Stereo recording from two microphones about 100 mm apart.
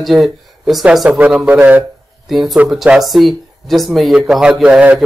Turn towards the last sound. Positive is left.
turn(degrees=-10)  # may be behind; listen again after turning